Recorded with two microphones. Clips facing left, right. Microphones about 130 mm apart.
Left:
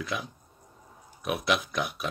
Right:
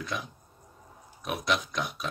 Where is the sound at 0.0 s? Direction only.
5° left (ahead or behind).